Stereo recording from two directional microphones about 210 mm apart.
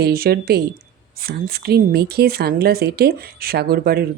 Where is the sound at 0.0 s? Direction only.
45° right (ahead or behind).